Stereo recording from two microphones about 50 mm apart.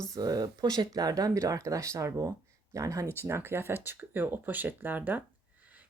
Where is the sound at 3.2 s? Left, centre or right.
Right.